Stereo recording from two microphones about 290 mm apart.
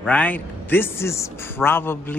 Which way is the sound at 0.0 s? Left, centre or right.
Centre.